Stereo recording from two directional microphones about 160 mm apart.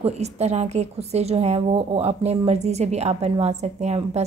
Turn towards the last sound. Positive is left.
turn(degrees=-45)  # may be behind; listen again after turning